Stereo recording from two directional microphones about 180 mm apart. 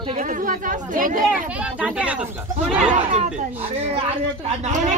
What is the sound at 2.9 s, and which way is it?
A child's voice, 40° right (ahead or behind).